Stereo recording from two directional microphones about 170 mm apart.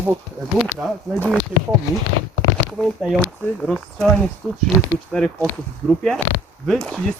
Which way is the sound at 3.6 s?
5° left (ahead or behind).